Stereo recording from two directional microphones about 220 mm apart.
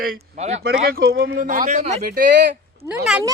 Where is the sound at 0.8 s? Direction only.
45° right (ahead or behind).